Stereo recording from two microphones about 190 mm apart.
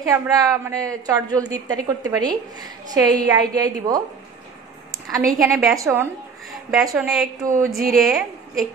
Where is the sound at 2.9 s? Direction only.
20° right (ahead or behind).